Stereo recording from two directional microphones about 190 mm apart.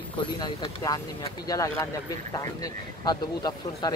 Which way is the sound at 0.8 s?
20° left (ahead or behind).